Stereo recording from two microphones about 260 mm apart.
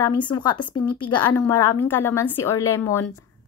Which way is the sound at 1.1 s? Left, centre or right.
Centre.